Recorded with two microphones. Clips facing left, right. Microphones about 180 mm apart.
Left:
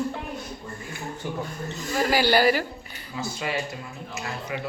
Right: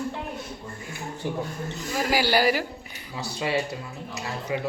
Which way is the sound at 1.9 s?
5° right (ahead or behind).